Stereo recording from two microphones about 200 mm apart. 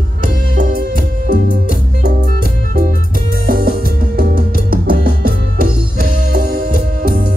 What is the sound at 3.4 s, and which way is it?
Music, 45° right (ahead or behind).